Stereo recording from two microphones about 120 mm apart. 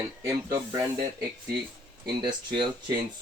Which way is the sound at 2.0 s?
45° right (ahead or behind).